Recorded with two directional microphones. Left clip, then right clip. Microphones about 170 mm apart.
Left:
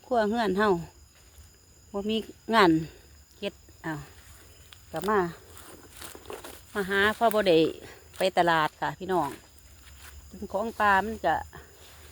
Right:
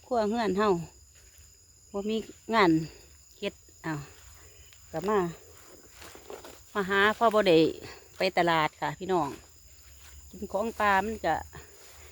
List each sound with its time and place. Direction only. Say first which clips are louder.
0.1 s speech: left 2 dB; 10° right (ahead or behind)
3.4 s speech: even; 30° right (ahead or behind)
4.9 s speech: left 2 dB; 20° right (ahead or behind)
6.2 s a sound: left 3 dB; 45° left (ahead or behind)
6.7 s speech: even; 25° right (ahead or behind)
10.5 s speech: left 2 dB; 25° right (ahead or behind)